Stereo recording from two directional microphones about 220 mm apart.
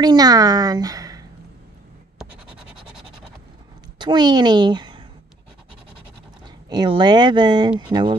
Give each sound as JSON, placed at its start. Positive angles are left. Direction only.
{"t": 0.0, "sound": "a woman's voice", "side_deg": -15}
{"t": 4.0, "sound": "a woman's voice", "side_deg": -20}
{"t": 6.4, "sound": "speech", "side_deg": -20}